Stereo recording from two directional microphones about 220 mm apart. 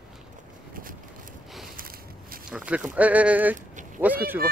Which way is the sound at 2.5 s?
5° right (ahead or behind).